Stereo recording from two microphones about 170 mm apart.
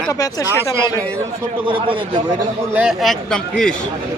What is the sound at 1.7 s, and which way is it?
Speech, 30° right (ahead or behind).